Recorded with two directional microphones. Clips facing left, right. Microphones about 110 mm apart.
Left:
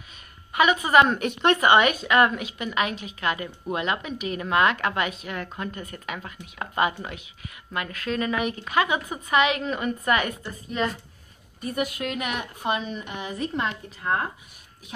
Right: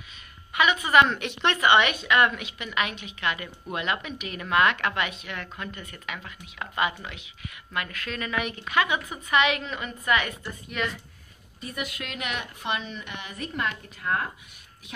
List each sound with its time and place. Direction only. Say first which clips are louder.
0.5 s a woman's voice: left 3 dB; 35° left (ahead or behind)